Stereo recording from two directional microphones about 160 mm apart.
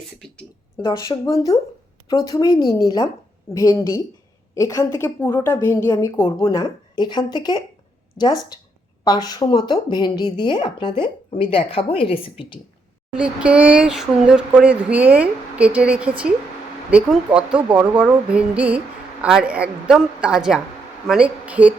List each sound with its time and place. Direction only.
0.8 s a woman's voice: 30° left (ahead or behind)
13.1 s a woman's voice: 5° right (ahead or behind)